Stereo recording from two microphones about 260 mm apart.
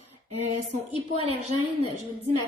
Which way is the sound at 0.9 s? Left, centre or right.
Right.